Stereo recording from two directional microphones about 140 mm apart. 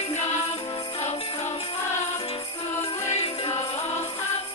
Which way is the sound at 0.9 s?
50° left (ahead or behind).